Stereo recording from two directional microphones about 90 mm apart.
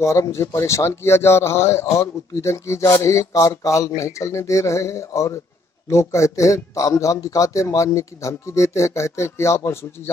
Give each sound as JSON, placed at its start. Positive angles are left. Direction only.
{"t": 0.0, "sound": "a man's voice", "side_deg": 30}